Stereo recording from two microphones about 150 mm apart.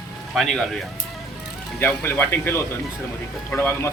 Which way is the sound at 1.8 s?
15° left (ahead or behind).